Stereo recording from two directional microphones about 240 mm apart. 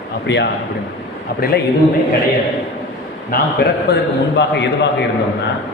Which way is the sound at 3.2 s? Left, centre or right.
Left.